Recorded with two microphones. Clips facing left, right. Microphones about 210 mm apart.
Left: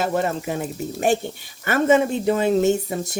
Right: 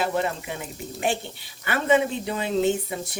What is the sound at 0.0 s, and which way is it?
Speech, 45° left (ahead or behind).